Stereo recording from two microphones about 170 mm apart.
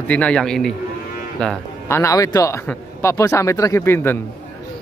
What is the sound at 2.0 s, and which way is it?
Speech, 20° left (ahead or behind).